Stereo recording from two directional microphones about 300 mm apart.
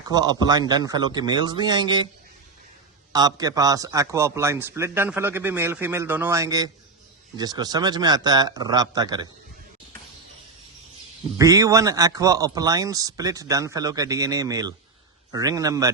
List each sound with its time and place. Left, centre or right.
0.1 s a man's voice: centre
3.1 s a man's voice: centre
11.3 s a man's voice: centre